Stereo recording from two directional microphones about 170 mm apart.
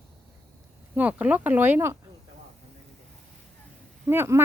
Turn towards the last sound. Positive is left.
turn(degrees=-15)  # may be behind; listen again after turning